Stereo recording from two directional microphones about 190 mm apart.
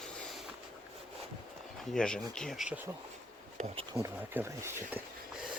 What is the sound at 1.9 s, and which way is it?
Speech, 5° left (ahead or behind).